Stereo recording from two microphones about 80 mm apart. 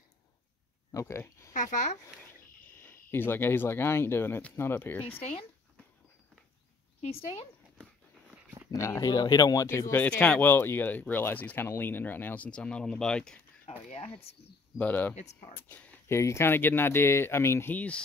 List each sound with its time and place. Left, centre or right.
0.9 s speech: left
2.8 s speech: left
8.7 s speech: left
9.1 s speech: left
9.7 s speech: left
10.0 s speech: centre
12.4 s speech: centre
14.8 s speech: left
16.1 s speech: left
17.7 s speech: centre